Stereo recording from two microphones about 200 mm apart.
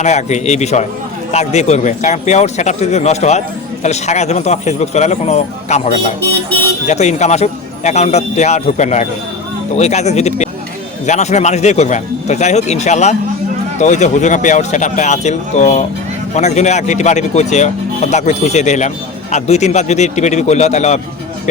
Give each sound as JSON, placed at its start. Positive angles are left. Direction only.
{"t": 0.0, "sound": "speech", "side_deg": 35}